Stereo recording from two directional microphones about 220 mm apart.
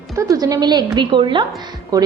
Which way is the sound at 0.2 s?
15° right (ahead or behind).